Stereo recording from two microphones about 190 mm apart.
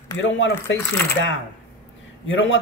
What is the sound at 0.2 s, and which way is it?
Speech, 75° left (ahead or behind).